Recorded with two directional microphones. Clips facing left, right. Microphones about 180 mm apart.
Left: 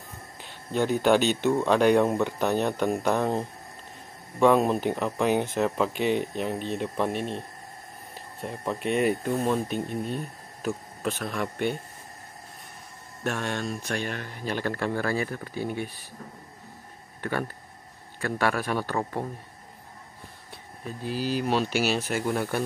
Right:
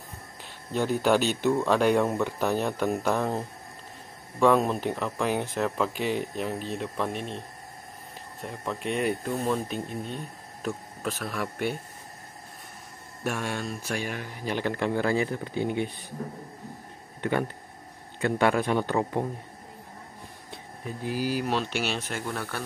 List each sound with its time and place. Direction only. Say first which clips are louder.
0.7 s speech: left 2 dB; centre (ahead or behind)
13.2 s speech: left 1 dB; 10° right (ahead or behind)
17.2 s a man's voice: right 3 dB; 20° right (ahead or behind)
20.8 s speech: right 1 dB; 15° right (ahead or behind)
21.5 s speech: left 3 dB; 5° left (ahead or behind)
22.3 s speech: left 8 dB; 15° left (ahead or behind)